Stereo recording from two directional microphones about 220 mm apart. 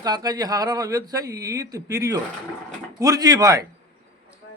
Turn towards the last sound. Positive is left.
turn(degrees=-15)  # may be behind; listen again after turning